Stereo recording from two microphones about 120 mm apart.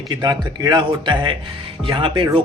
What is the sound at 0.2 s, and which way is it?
A man's voice, 35° right (ahead or behind).